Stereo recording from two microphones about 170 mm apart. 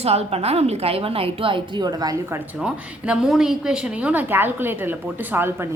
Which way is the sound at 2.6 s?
5° right (ahead or behind).